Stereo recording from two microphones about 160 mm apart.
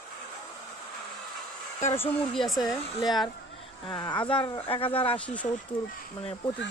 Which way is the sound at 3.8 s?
30° left (ahead or behind).